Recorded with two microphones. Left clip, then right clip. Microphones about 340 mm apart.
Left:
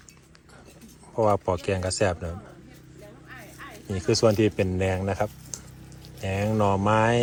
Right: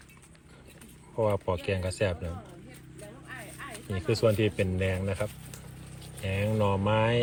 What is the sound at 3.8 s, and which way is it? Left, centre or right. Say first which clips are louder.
Speech: left 6 dB; left.